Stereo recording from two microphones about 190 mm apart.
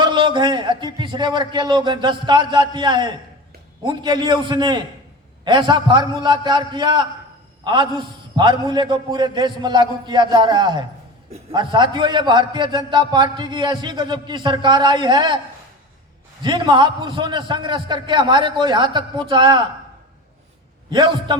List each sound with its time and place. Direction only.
0.0 s a man's voice: 25° right (ahead or behind)
16.4 s a man's voice: 25° right (ahead or behind)
20.9 s a man's voice: 25° right (ahead or behind)